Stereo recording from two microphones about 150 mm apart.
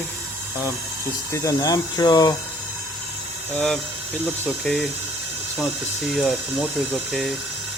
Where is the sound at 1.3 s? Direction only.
20° left (ahead or behind).